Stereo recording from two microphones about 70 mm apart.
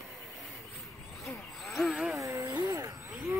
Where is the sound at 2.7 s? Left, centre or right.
Right.